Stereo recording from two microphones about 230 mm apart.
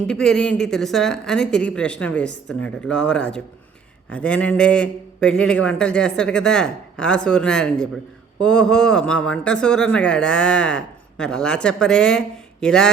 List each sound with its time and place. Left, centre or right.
0.1 s speech: centre